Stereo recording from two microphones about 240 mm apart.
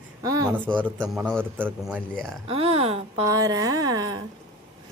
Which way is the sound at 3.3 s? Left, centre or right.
Centre.